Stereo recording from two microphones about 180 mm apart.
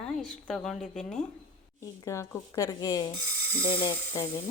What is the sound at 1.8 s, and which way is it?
A woman's voice, 15° left (ahead or behind).